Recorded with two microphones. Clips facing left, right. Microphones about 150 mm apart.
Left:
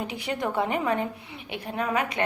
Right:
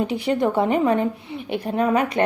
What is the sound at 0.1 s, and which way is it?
A woman's voice, 30° right (ahead or behind).